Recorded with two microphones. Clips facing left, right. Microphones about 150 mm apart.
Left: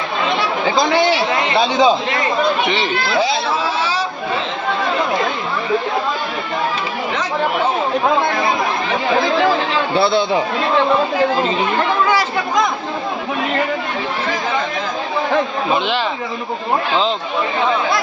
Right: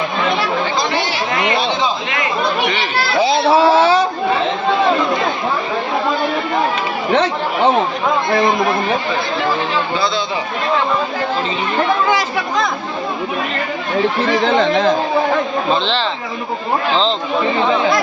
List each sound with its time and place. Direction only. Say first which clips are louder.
3.5 s a sound: right 9 dB; 60° right (ahead or behind)
9.9 s speech: left 4 dB; 65° left (ahead or behind)
14.4 s speech: right 8 dB; 70° right (ahead or behind)